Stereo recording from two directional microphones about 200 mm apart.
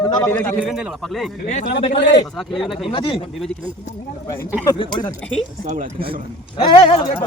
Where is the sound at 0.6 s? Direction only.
Centre (ahead or behind).